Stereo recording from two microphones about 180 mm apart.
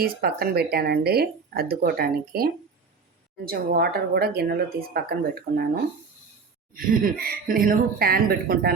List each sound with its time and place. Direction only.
0.0 s speech: 60° right (ahead or behind)
6.7 s speech: 55° right (ahead or behind)